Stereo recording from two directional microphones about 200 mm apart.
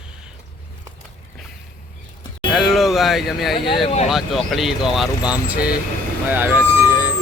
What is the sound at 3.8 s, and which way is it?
Speech, 30° left (ahead or behind).